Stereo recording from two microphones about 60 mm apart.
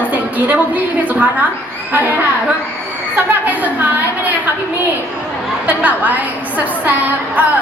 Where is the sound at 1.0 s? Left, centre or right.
Right.